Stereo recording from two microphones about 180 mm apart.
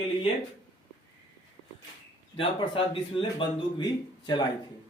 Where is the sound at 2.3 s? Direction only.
30° left (ahead or behind).